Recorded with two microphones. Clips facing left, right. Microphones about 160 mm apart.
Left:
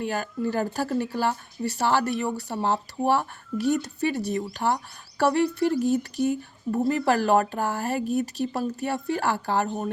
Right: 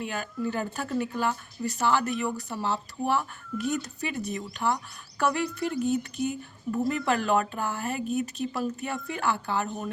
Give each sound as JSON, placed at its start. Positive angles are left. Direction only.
{"t": 0.0, "sound": "speech", "side_deg": 35}